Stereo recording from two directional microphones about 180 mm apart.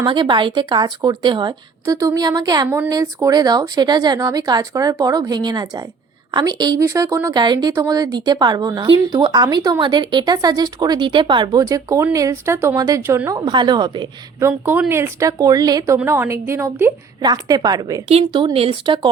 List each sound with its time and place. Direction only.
0.0 s a woman's voice: 25° right (ahead or behind)
2.6 s a woman's voice: 10° right (ahead or behind)
2.9 s a woman's voice: 20° right (ahead or behind)
13.4 s a woman's voice: 25° right (ahead or behind)
18.1 s a woman's voice: 30° right (ahead or behind)